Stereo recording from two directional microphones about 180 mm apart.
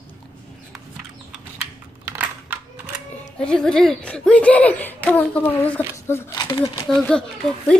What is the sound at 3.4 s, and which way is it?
Speech, 5° left (ahead or behind).